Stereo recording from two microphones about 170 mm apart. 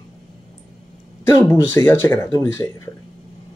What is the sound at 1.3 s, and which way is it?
Speech, 15° left (ahead or behind).